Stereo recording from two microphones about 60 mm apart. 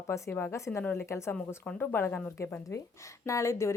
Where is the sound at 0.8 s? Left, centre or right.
Left.